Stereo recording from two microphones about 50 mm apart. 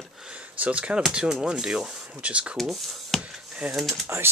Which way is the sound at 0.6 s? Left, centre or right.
Right.